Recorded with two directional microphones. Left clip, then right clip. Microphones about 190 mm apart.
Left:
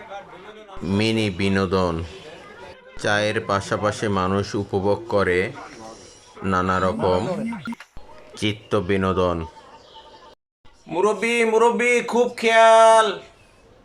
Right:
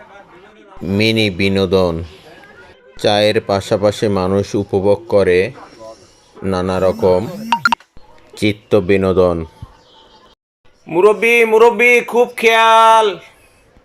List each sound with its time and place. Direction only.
0.9 s speech: 15° right (ahead or behind)
3.0 s speech: 20° right (ahead or behind)
8.4 s speech: 20° right (ahead or behind)
10.8 s speech: 15° right (ahead or behind)